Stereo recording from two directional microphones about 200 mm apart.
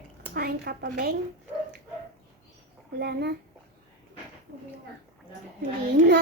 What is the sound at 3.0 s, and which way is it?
Speech, 55° right (ahead or behind).